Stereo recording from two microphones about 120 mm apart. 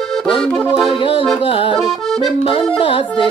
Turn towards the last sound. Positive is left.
turn(degrees=45)  # may be behind; listen again after turning